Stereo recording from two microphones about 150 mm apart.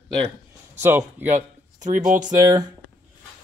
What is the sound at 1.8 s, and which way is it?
Speech, 55° right (ahead or behind).